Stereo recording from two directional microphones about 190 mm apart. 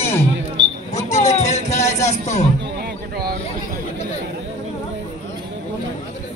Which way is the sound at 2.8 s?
55° right (ahead or behind).